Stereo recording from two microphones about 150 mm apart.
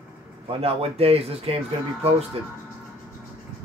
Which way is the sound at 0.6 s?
40° right (ahead or behind).